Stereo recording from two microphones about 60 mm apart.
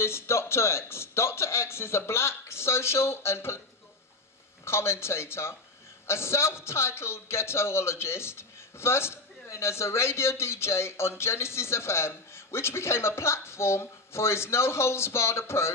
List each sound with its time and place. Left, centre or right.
0.0 s a man's voice: left
4.6 s a man's voice: left